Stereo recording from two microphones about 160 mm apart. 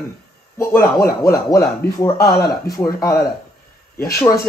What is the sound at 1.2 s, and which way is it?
Speech, 20° left (ahead or behind).